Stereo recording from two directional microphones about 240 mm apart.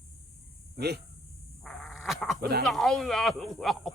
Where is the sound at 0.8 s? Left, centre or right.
Right.